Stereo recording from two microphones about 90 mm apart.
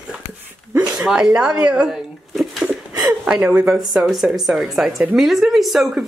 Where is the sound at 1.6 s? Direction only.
10° right (ahead or behind).